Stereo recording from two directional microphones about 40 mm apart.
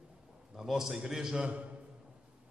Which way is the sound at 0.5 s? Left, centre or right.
Centre.